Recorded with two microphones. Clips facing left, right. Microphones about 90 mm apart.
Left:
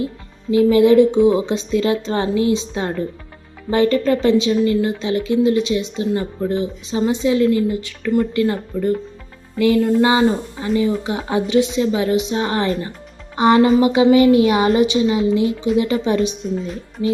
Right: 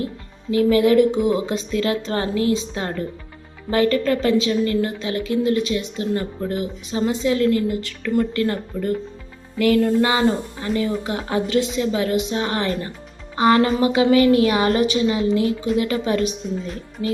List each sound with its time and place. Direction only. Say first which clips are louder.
0.5 s a woman's voice: left 4 dB; 25° left (ahead or behind)